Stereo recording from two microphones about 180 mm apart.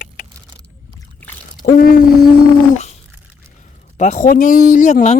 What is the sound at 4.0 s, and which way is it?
A woman's voice, 40° left (ahead or behind).